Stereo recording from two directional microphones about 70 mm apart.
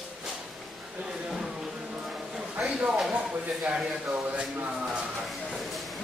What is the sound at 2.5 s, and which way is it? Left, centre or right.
Speech, centre.